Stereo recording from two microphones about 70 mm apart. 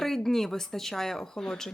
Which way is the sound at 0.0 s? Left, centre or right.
Centre.